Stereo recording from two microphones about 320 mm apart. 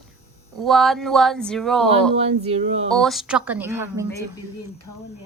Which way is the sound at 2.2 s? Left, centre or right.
Centre.